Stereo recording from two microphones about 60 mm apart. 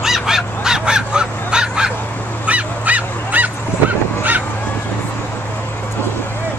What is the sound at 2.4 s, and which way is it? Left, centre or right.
Dog, right.